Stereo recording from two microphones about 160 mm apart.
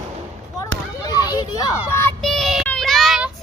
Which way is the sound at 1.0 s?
25° left (ahead or behind).